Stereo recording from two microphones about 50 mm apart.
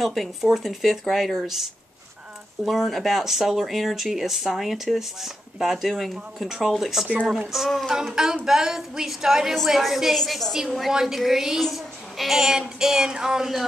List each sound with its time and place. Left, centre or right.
0.0 s speech: centre
1.4 s child singing: centre
2.6 s speech: centre
7.9 s child singing: centre
10.1 s speech: centre
10.9 s child singing: centre